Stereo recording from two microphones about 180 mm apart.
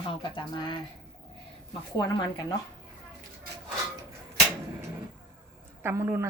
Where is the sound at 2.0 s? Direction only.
20° left (ahead or behind).